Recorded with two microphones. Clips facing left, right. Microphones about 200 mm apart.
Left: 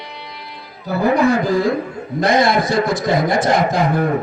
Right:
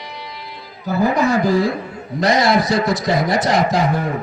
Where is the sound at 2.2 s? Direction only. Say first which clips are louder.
Even; 55° left (ahead or behind).